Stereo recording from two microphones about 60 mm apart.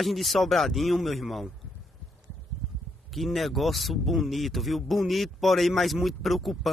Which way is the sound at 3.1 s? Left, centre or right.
Centre.